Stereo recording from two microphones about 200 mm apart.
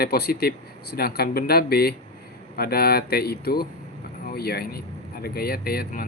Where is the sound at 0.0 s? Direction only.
50° left (ahead or behind).